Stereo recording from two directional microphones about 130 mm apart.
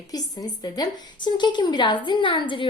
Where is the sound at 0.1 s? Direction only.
30° left (ahead or behind).